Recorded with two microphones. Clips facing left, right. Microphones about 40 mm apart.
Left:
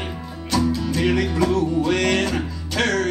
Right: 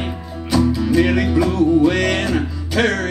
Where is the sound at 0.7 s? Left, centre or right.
Centre.